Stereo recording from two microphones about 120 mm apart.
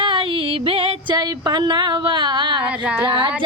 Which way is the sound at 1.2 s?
35° right (ahead or behind).